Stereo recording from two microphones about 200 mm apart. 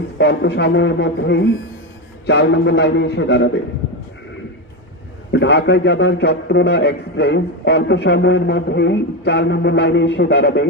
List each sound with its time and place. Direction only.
0.2 s a man's voice: 60° left (ahead or behind)
5.3 s a man's voice: 60° left (ahead or behind)